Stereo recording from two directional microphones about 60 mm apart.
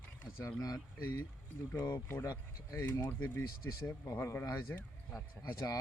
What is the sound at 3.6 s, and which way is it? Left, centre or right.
Speech, left.